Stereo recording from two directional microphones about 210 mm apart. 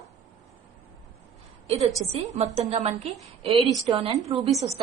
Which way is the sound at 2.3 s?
30° right (ahead or behind).